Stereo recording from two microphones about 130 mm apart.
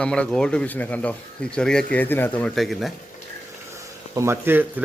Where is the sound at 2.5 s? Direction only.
Centre (ahead or behind).